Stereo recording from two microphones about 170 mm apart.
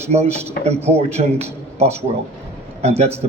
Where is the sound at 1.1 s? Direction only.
40° right (ahead or behind).